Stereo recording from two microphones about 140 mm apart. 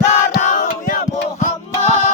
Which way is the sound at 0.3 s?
70° left (ahead or behind).